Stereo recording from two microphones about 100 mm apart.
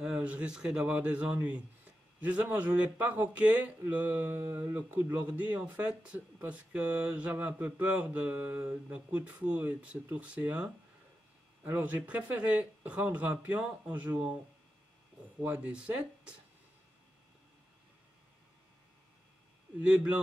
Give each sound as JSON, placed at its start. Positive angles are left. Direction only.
{"t": 0.0, "sound": "speech", "side_deg": -10}
{"t": 15.4, "sound": "speech", "side_deg": -15}
{"t": 19.8, "sound": "speech", "side_deg": -15}